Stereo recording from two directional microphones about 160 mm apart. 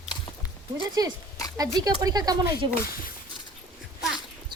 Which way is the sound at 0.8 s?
25° right (ahead or behind).